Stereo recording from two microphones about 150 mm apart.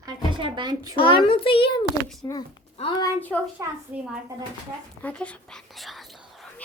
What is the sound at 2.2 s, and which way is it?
A child's voice, 20° left (ahead or behind).